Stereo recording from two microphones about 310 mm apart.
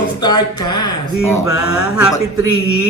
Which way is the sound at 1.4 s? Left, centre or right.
Left.